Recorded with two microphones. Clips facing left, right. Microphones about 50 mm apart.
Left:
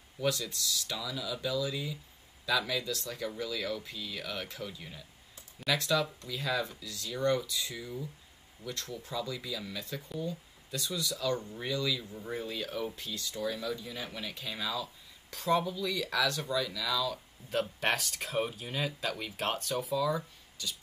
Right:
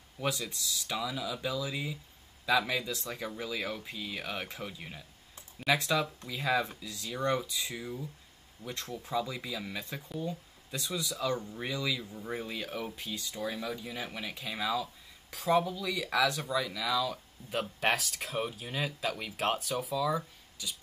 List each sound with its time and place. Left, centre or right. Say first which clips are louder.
0.2 s speech: left 2 dB; centre
12.1 s speech: right 1 dB; centre
12.4 s speech: left 3 dB; centre
17.5 s speech: even; centre